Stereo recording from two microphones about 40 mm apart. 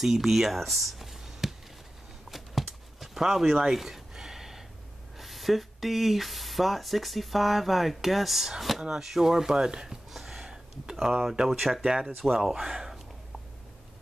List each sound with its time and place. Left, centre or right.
0.0 s speech: centre
2.3 s a sound: centre
5.1 s speech: centre
10.1 s a sound: centre
11.0 s speech: centre
11.8 s speech: centre
12.2 s speech: centre